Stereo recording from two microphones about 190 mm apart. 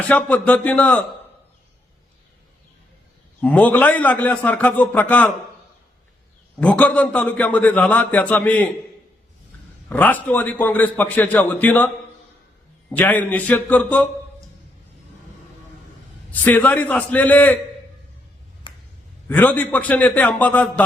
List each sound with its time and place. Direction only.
0.1 s a man's voice: 5° left (ahead or behind)
3.4 s a man's voice: 5° left (ahead or behind)
6.6 s a man's voice: 5° left (ahead or behind)
9.9 s a man's voice: 10° left (ahead or behind)
12.9 s a man's voice: 10° left (ahead or behind)
16.3 s a man's voice: 10° left (ahead or behind)
18.7 s a sound: 25° left (ahead or behind)
19.3 s a man's voice: 10° left (ahead or behind)